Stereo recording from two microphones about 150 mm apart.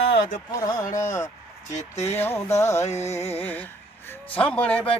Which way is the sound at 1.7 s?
45° left (ahead or behind).